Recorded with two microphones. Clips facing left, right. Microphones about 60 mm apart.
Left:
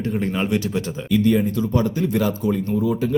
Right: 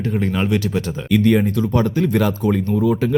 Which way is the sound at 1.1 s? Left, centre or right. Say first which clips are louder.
Right 2 dB; right.